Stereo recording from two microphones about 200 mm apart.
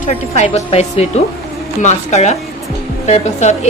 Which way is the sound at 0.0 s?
35° left (ahead or behind).